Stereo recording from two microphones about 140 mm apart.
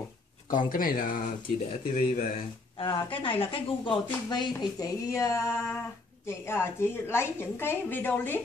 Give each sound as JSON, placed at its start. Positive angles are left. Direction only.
{"t": 0.5, "sound": "speech", "side_deg": 75}
{"t": 2.8, "sound": "a woman's voice", "side_deg": 35}